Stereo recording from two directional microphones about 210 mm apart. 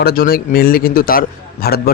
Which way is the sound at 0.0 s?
45° left (ahead or behind).